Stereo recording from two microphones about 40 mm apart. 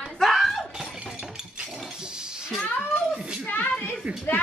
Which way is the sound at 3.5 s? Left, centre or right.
Left.